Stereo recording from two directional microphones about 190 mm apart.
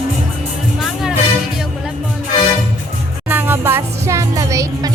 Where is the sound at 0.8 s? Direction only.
Centre (ahead or behind).